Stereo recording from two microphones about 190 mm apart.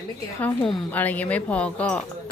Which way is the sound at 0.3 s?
10° left (ahead or behind).